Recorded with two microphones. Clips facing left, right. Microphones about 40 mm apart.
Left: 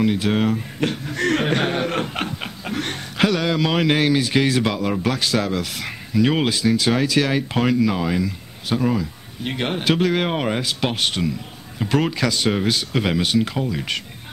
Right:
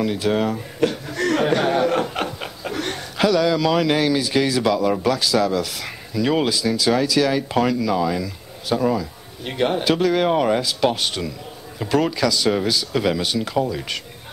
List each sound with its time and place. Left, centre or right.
0.0 s speech: left
10.6 s speech: left